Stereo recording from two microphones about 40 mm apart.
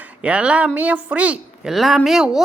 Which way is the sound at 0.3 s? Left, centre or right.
Right.